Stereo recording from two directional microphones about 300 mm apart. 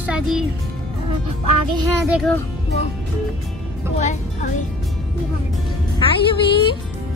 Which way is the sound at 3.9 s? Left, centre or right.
Left.